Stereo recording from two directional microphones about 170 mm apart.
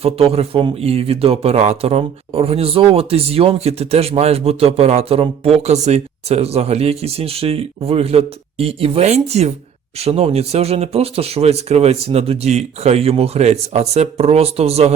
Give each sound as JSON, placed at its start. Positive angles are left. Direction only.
{"t": 0.0, "sound": "speech", "side_deg": -35}